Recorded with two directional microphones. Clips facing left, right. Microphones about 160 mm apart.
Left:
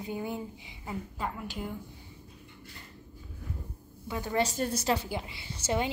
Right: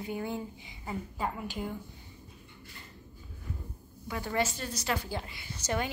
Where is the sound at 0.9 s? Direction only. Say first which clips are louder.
Right 1 dB; 5° right (ahead or behind).